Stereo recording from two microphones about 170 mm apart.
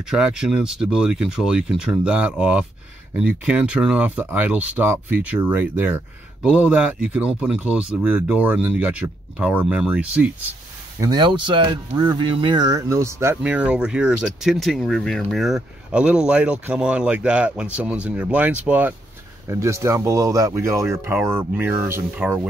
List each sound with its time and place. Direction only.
0.1 s speech: 5° right (ahead or behind)
11.0 s speech: 25° right (ahead or behind)